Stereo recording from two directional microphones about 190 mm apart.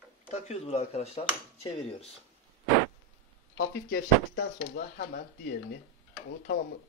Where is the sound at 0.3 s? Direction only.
35° left (ahead or behind).